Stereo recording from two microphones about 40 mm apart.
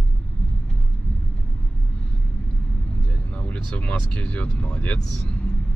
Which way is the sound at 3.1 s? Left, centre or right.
Left.